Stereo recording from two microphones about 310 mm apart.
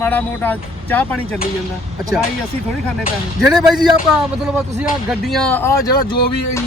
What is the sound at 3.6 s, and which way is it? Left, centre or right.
Speech, centre.